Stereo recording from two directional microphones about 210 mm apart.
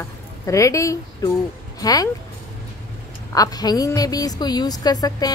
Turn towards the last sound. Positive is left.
turn(degrees=20)  # may be behind; listen again after turning